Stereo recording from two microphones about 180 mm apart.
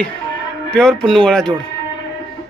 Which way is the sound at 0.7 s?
5° left (ahead or behind).